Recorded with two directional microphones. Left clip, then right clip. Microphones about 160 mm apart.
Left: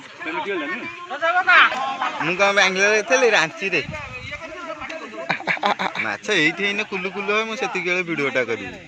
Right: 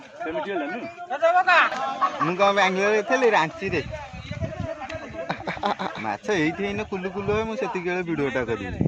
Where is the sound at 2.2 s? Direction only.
80° right.